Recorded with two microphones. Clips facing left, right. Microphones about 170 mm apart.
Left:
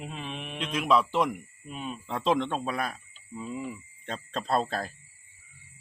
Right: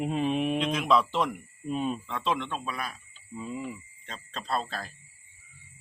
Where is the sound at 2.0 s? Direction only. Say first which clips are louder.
Left 4 dB; 35° left (ahead or behind).